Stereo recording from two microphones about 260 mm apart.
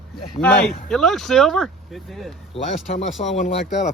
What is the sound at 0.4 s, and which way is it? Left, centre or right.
Speech, centre.